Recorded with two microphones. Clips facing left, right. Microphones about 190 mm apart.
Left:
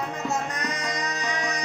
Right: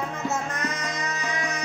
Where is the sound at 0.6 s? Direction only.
35° left (ahead or behind).